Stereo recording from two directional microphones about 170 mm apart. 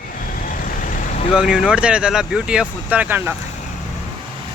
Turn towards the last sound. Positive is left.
turn(degrees=-10)  # may be behind; listen again after turning